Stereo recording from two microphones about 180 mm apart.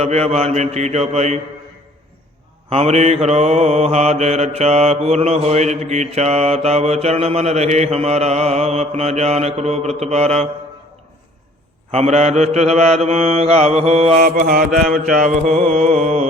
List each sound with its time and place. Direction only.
0.0 s mantra: 35° right (ahead or behind)
2.6 s mantra: 35° right (ahead or behind)
11.9 s mantra: 35° right (ahead or behind)
14.2 s mantra: 50° right (ahead or behind)